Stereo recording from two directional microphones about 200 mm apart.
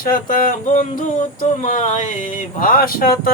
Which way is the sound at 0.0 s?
45° left (ahead or behind).